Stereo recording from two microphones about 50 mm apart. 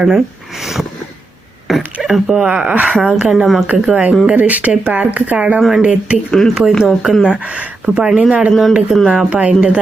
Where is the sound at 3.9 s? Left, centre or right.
Right.